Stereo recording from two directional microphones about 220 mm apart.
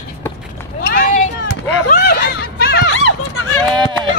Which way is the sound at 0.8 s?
45° left (ahead or behind).